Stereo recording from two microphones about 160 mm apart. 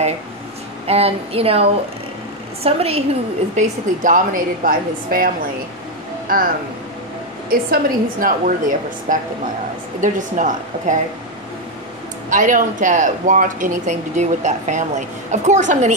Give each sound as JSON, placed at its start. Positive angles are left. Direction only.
{"t": 0.8, "sound": "speech", "side_deg": -40}
{"t": 3.5, "sound": "a woman's voice", "side_deg": -55}
{"t": 7.7, "sound": "a woman's voice", "side_deg": -60}
{"t": 12.3, "sound": "speech", "side_deg": -55}